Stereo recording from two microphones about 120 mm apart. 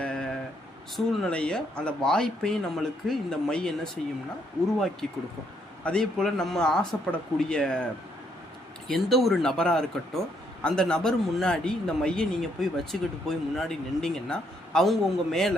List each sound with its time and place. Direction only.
0.0 s vehicle: 5° left (ahead or behind)
0.9 s a man's voice: 5° left (ahead or behind)
5.8 s a man's voice: 5° left (ahead or behind)
8.9 s a man's voice: centre (ahead or behind)